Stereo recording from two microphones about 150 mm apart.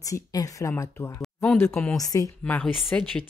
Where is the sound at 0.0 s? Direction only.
25° left (ahead or behind).